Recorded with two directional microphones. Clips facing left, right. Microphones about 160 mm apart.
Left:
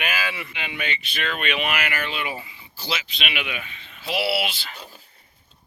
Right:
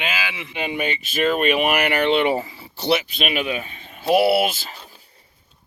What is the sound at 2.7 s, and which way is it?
Speech, 70° right (ahead or behind).